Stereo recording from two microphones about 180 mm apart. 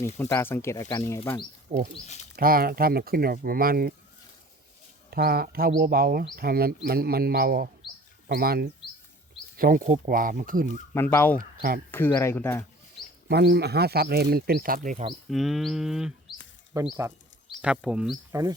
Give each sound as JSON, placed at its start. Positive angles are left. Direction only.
{"t": 0.2, "sound": "speech", "side_deg": 15}
{"t": 1.7, "sound": "speech", "side_deg": -40}
{"t": 2.3, "sound": "speech", "side_deg": -55}
{"t": 5.1, "sound": "speech", "side_deg": -60}
{"t": 10.9, "sound": "speech", "side_deg": 10}
{"t": 13.2, "sound": "speech", "side_deg": -65}
{"t": 15.3, "sound": "a sound", "side_deg": 0}
{"t": 16.7, "sound": "speech", "side_deg": -15}
{"t": 17.6, "sound": "a sound", "side_deg": -5}
{"t": 18.3, "sound": "speech", "side_deg": -15}